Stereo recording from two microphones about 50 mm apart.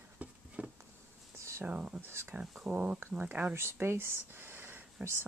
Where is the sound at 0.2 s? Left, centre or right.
Right.